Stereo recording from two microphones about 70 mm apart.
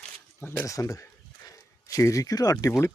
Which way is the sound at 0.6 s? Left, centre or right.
Left.